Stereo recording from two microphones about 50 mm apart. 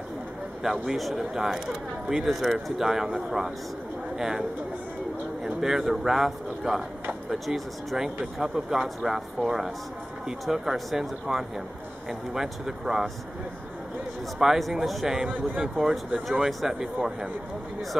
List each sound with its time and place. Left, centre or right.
0.6 s speech: centre
14.4 s speech: centre
15.2 s speech: right
15.6 s speech: centre
16.3 s speech: centre